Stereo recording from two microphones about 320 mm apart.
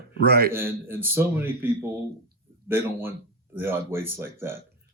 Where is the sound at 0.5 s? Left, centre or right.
Centre.